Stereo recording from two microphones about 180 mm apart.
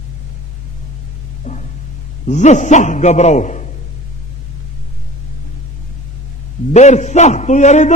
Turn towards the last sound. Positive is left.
turn(degrees=40)  # may be behind; listen again after turning